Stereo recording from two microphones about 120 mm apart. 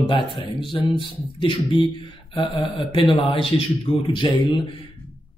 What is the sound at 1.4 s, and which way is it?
Speech, 40° left (ahead or behind).